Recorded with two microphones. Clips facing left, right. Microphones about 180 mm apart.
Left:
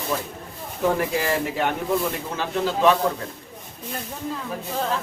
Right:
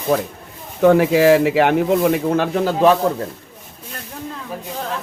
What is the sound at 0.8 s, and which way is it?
Speech, 75° right (ahead or behind).